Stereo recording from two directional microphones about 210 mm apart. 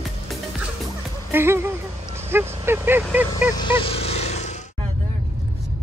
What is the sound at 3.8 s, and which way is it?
Vehicle, 30° left (ahead or behind).